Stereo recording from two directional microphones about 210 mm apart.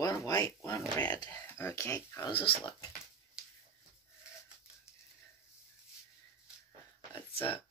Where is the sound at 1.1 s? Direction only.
20° left (ahead or behind).